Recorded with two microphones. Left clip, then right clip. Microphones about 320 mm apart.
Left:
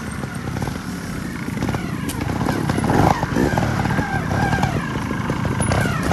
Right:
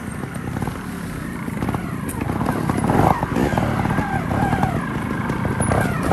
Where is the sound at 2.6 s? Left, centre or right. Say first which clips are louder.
Even; right.